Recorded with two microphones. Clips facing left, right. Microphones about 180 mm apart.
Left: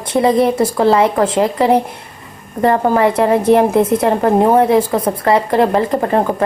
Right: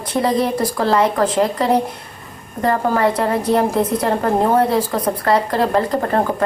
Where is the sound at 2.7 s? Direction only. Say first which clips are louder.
Left 4 dB; 25° left (ahead or behind).